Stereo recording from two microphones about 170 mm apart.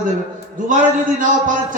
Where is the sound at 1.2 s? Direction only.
50° right (ahead or behind).